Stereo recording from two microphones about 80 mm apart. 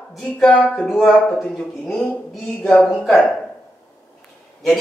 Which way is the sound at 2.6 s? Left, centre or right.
Left.